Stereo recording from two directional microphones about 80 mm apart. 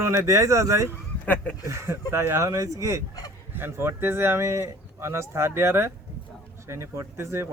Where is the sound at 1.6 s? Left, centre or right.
Right.